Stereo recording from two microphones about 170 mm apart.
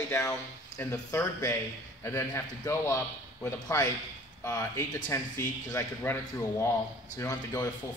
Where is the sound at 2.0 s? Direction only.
15° left (ahead or behind).